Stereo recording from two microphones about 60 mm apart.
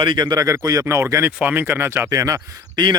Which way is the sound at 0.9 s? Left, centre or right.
Right.